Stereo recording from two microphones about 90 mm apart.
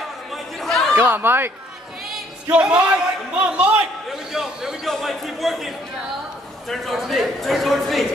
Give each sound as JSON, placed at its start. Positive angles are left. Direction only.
{"t": 0.3, "sound": "chatter", "side_deg": 0}
{"t": 0.9, "sound": "speech", "side_deg": -25}
{"t": 2.5, "sound": "a man's voice", "side_deg": -10}